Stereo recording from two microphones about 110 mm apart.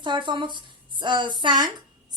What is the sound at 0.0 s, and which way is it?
A woman's voice, 45° right (ahead or behind).